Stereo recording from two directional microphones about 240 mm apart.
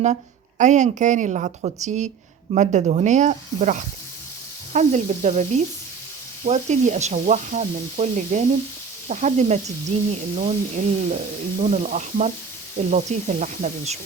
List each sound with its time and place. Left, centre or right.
0.6 s sizzle: right
9.0 s speech: right
12.7 s sizzle: right